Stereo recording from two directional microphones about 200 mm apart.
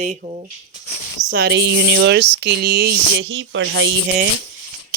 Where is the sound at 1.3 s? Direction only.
55° right (ahead or behind); by 4.3 s 70° right (ahead or behind).